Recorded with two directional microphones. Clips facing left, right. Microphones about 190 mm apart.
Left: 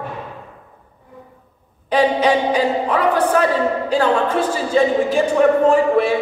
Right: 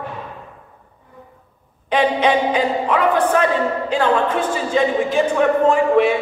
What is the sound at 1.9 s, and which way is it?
Speech, 35° left (ahead or behind).